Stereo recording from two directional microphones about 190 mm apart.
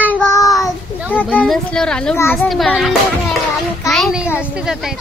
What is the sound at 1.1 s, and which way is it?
A child's voice, 5° left (ahead or behind).